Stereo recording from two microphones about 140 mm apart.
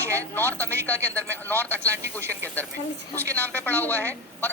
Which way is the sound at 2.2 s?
15° right (ahead or behind).